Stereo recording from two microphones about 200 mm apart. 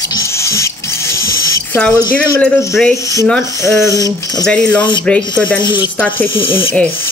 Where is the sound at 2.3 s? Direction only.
10° left (ahead or behind).